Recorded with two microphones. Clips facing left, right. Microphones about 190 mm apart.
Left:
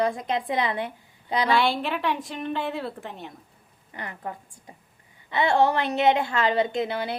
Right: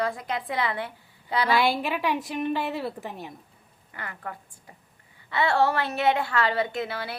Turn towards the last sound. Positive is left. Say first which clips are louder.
# left 4 dB
turn(degrees=20)  # may be behind; listen again after turning